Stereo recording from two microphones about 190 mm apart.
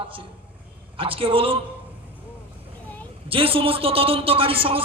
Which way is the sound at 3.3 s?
30° right (ahead or behind).